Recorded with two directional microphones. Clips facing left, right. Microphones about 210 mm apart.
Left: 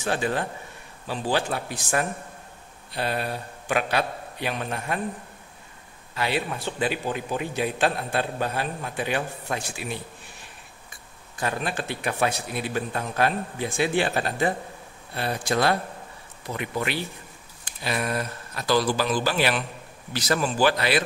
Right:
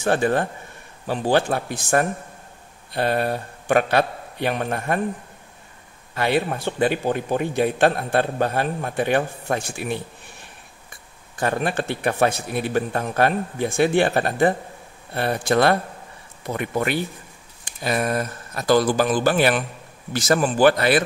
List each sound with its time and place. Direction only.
0.0 s a man's voice: 50° right (ahead or behind)
6.1 s a man's voice: 50° right (ahead or behind)
11.3 s a man's voice: 55° right (ahead or behind)